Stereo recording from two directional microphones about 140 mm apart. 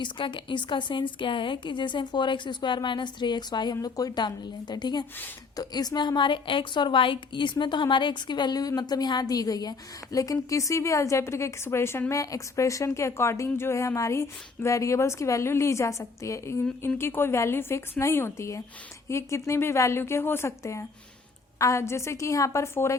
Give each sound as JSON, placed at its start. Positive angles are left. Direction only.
{"t": 0.0, "sound": "a woman's voice", "side_deg": 35}